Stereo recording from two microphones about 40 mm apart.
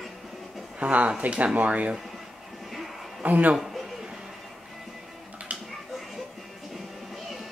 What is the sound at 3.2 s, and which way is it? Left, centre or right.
Speech, right.